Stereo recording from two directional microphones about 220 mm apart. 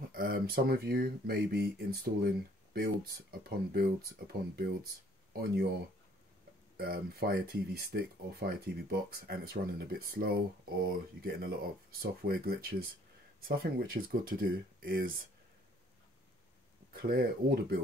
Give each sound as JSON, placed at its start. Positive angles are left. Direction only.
{"t": 0.1, "sound": "speech", "side_deg": -40}
{"t": 6.8, "sound": "speech", "side_deg": -45}
{"t": 16.9, "sound": "speech", "side_deg": -40}